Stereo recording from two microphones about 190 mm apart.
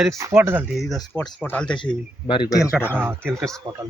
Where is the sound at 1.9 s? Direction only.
25° left (ahead or behind).